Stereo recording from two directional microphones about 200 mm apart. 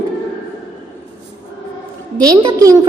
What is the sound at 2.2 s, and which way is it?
Speech, 20° right (ahead or behind).